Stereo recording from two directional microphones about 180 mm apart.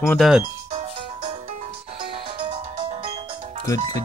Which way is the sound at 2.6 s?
30° right (ahead or behind).